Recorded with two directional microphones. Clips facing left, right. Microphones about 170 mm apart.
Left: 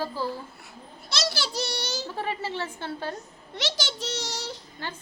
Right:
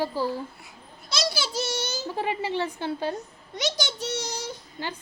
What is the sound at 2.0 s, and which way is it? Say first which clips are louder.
A woman's voice: right 3 dB; 15° right (ahead or behind).